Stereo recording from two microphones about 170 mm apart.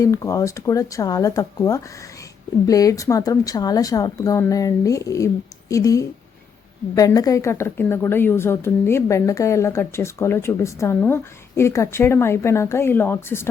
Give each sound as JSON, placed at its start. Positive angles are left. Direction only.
{"t": 0.0, "sound": "a woman's voice", "side_deg": 20}